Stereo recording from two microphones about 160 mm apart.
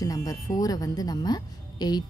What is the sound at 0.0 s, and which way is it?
A woman's voice, 20° left (ahead or behind).